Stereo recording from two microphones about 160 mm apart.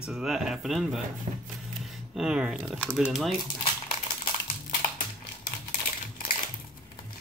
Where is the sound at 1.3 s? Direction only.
40° right (ahead or behind).